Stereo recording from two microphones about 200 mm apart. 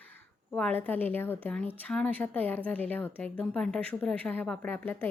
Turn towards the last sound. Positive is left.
turn(degrees=10)  # may be behind; listen again after turning